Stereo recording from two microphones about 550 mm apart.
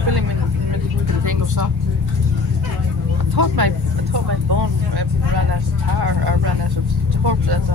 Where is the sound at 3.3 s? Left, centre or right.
Right.